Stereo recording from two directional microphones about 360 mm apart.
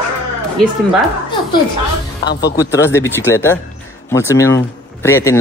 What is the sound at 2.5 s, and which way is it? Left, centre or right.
Speech, centre.